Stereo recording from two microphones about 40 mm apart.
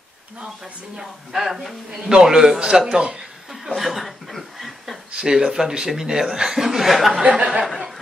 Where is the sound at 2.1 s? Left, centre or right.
Centre.